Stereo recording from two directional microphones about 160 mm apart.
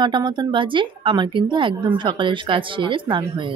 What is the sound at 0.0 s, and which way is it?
A woman's voice, 30° right (ahead or behind).